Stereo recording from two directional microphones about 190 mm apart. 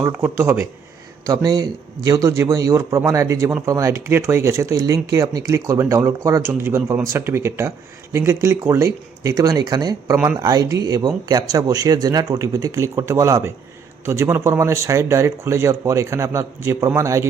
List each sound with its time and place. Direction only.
0.0 s speech: 10° right (ahead or behind)